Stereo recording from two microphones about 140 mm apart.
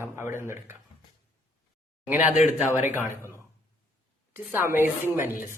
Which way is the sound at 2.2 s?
55° left (ahead or behind).